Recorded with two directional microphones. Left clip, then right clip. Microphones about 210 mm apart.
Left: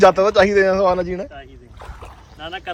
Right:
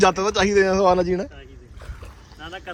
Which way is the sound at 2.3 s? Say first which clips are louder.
Left 6 dB; centre (ahead or behind).